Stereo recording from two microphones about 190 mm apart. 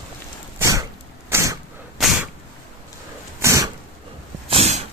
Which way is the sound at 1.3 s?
15° right (ahead or behind).